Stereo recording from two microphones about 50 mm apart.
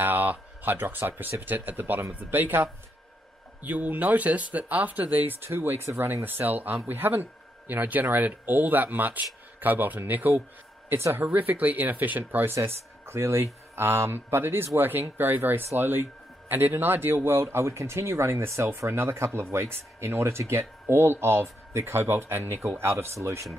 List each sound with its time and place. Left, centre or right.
0.0 s speech: right
3.6 s speech: right
6.2 s speech: right
10.9 s speech: right
11.1 s speech: right
12.5 s speech: right
18.3 s speech: right
18.8 s speech: right